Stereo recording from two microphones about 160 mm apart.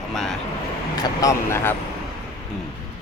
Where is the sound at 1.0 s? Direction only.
20° left (ahead or behind).